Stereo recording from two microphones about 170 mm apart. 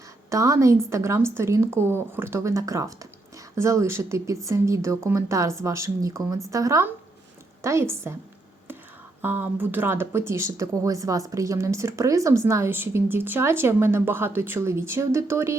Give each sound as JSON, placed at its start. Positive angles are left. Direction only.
{"t": 0.3, "sound": "speech", "side_deg": -20}
{"t": 9.2, "sound": "speech", "side_deg": -10}